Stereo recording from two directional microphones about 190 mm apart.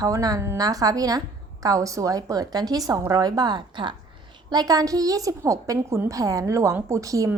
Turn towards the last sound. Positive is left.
turn(degrees=-15)  # may be behind; listen again after turning